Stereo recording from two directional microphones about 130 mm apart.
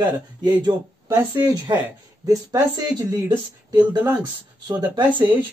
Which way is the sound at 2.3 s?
25° right (ahead or behind).